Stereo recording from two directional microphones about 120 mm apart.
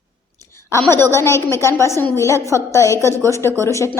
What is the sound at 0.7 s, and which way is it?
A woman's voice, 20° left (ahead or behind).